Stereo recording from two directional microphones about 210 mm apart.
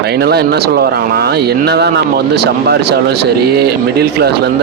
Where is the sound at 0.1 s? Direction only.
50° right (ahead or behind).